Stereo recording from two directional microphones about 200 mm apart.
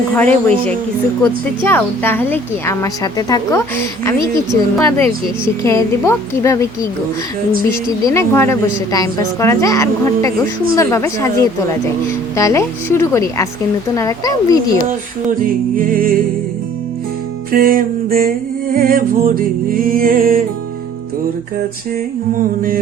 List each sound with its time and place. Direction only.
0.2 s a woman's voice: 5° left (ahead or behind)
8.0 s a woman's voice: 15° left (ahead or behind)
12.4 s a woman's voice: 15° left (ahead or behind)
15.8 s music: 45° right (ahead or behind)
17.5 s music: 45° right (ahead or behind)
22.4 s music: 45° right (ahead or behind)